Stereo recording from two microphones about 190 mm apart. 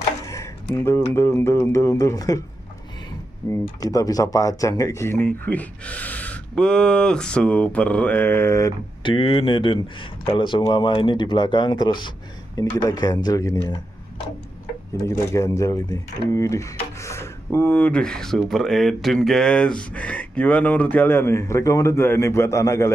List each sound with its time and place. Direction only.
0.3 s speech: 15° left (ahead or behind)
3.8 s speech: 20° left (ahead or behind)
15.0 s speech: 15° left (ahead or behind)